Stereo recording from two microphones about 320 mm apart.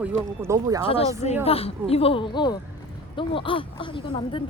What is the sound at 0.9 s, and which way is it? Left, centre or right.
A woman's voice, centre.